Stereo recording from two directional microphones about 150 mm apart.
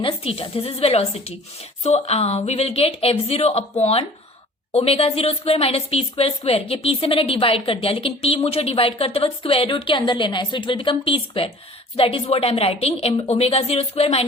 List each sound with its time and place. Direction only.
0.0 s a woman's voice: 40° left (ahead or behind)